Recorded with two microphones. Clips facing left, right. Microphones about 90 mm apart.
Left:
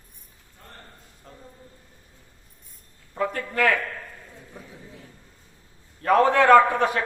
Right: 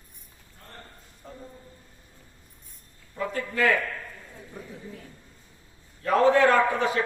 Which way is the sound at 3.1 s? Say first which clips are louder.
Left 3 dB; 65° left (ahead or behind).